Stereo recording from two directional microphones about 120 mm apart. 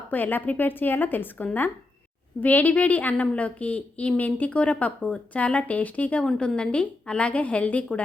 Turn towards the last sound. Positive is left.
turn(degrees=10)  # may be behind; listen again after turning